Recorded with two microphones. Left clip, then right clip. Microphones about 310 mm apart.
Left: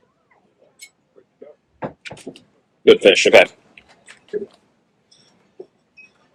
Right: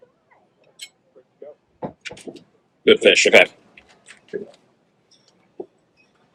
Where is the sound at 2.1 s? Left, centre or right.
Left.